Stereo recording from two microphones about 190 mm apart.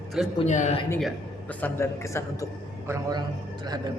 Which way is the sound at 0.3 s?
40° left (ahead or behind).